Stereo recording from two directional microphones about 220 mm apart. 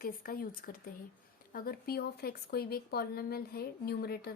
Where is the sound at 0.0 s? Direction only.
40° left (ahead or behind).